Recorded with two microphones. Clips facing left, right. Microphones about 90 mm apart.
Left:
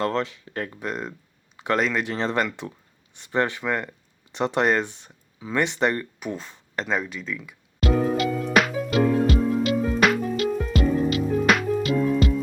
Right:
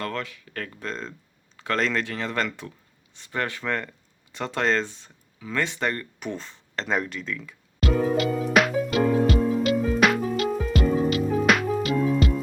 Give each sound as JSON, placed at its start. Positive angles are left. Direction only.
{"t": 0.0, "sound": "speech", "side_deg": 25}
{"t": 2.0, "sound": "speech", "side_deg": 30}
{"t": 6.1, "sound": "speech", "side_deg": 5}
{"t": 6.8, "sound": "music", "side_deg": 0}